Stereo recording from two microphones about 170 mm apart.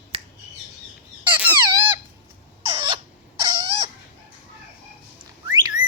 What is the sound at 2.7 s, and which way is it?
Rodents, 30° right (ahead or behind).